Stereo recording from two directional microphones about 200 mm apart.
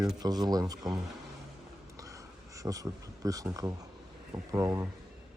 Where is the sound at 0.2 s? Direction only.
20° right (ahead or behind).